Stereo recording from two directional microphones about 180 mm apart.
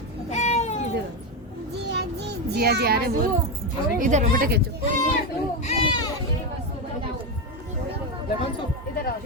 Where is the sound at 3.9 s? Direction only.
45° right (ahead or behind).